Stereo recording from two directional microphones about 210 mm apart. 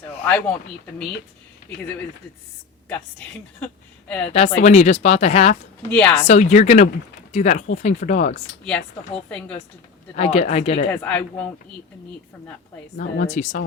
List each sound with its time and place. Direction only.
0.3 s a man's voice: 5° left (ahead or behind)
4.4 s speech: 30° left (ahead or behind)
5.9 s a woman's voice: 5° left (ahead or behind)
6.2 s speech: 30° left (ahead or behind)
8.6 s a woman's voice: 5° left (ahead or behind)
10.2 s speech: 30° left (ahead or behind)
11.0 s a man's voice: 5° left (ahead or behind)
13.0 s speech: 35° left (ahead or behind)